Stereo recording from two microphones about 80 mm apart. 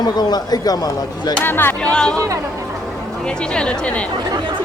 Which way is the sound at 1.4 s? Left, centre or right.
Left.